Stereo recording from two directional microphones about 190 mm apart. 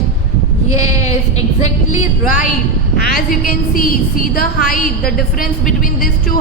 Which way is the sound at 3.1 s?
50° left (ahead or behind).